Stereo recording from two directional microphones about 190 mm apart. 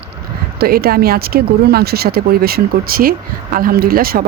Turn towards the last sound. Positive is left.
turn(degrees=-50)  # may be behind; listen again after turning